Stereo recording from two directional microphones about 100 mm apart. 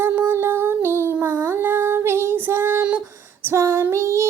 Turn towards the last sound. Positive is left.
turn(degrees=-30)  # may be behind; listen again after turning